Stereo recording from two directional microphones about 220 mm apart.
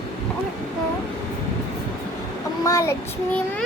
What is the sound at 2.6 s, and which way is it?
Child singing, 15° left (ahead or behind).